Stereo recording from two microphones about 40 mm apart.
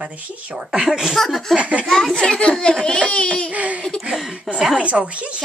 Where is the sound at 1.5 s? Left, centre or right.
Right.